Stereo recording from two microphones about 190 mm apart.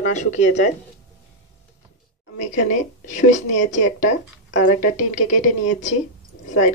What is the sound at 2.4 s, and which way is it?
Speech, 40° left (ahead or behind).